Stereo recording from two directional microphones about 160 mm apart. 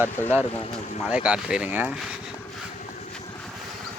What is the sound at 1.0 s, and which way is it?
Speech, 5° right (ahead or behind).